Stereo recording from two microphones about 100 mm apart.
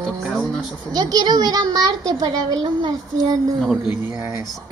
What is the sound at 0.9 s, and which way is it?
A child's voice, 40° right (ahead or behind).